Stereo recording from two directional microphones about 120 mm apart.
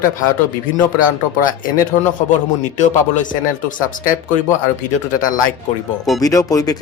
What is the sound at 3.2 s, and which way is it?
Speech, 90° left.